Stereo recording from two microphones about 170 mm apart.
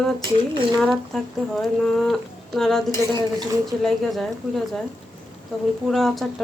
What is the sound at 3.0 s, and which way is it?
Speech, 20° right (ahead or behind).